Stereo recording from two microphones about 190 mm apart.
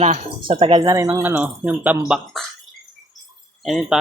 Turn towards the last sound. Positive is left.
turn(degrees=0)  # may be behind; listen again after turning